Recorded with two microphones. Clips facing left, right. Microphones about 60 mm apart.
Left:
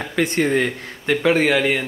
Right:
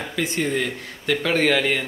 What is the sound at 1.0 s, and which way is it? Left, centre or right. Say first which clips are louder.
Speech: left 3 dB; centre.